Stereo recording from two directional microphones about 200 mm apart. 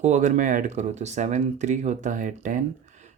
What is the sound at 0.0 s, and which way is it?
Speech, 40° right (ahead or behind).